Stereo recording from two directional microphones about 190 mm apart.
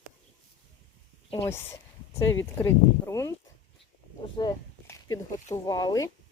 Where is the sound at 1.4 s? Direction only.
15° left (ahead or behind).